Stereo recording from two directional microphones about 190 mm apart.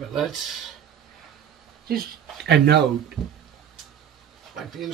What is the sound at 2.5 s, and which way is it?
Speech, 60° right (ahead or behind).